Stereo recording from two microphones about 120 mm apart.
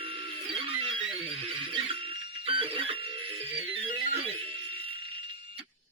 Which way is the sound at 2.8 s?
50° right (ahead or behind).